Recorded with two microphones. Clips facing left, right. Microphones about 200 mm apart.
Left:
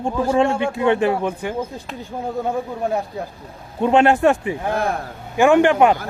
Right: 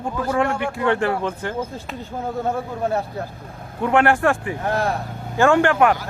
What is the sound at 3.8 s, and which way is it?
A man's voice, 20° left (ahead or behind).